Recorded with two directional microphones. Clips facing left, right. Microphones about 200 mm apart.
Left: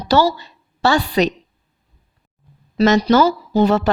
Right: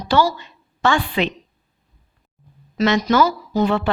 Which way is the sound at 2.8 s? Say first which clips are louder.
Left 3 dB; 35° left (ahead or behind).